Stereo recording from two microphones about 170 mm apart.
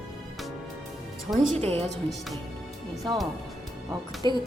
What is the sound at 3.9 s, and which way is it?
Speech, 25° right (ahead or behind).